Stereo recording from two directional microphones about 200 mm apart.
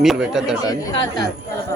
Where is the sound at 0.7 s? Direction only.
15° left (ahead or behind).